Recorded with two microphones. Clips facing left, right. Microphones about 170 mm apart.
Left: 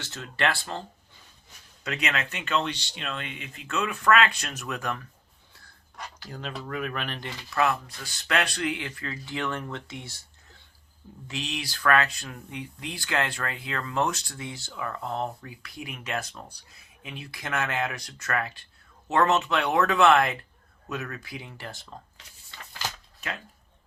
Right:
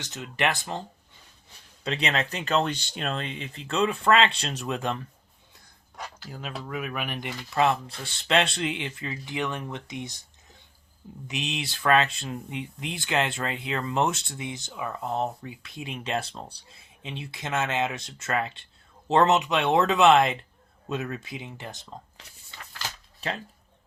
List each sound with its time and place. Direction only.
0.0 s speech: 20° right (ahead or behind)
1.8 s speech: 30° right (ahead or behind)
6.2 s speech: 5° right (ahead or behind); by 19.3 s 30° right (ahead or behind)
19.3 s speech: 20° right (ahead or behind)
23.2 s speech: 35° right (ahead or behind)